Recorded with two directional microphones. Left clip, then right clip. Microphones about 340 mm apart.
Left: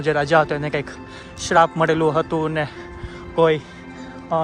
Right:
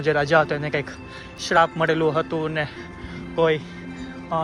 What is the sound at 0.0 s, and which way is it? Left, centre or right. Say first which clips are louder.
Speech: left 2 dB; centre.